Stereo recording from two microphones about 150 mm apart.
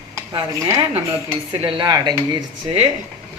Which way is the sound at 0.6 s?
20° right (ahead or behind).